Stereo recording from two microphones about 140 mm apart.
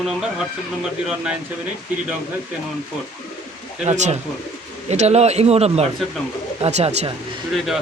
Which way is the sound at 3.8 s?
55° right (ahead or behind).